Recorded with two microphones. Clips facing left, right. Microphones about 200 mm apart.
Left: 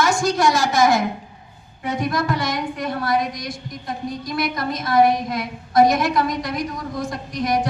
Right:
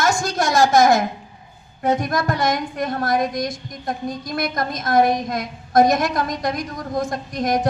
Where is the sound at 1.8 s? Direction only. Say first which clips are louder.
Right 3 dB; 45° right (ahead or behind).